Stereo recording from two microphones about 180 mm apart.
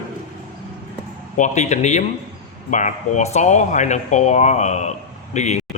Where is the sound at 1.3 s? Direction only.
40° left (ahead or behind).